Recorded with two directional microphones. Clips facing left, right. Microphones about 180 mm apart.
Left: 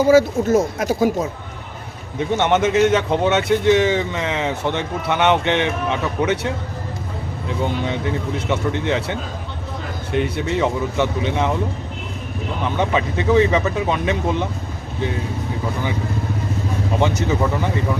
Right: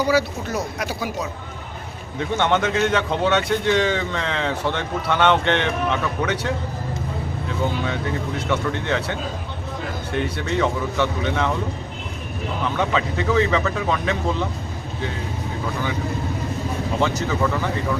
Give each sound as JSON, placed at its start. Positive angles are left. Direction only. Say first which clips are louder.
{"t": 0.0, "sound": "speech", "louder": "left 7 dB", "side_deg": 45}
{"t": 2.1, "sound": "a man's voice", "louder": "left 3 dB", "side_deg": 20}
{"t": 12.7, "sound": "speech", "louder": "left 3 dB", "side_deg": 20}
{"t": 17.0, "sound": "speech", "louder": "left 2 dB", "side_deg": 20}